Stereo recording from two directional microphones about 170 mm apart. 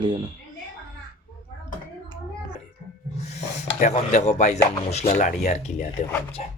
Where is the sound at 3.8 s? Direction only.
45° left (ahead or behind).